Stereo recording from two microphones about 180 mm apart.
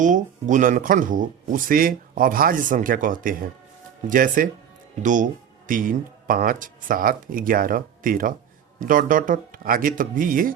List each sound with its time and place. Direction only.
0.0 s speech: 45° right (ahead or behind)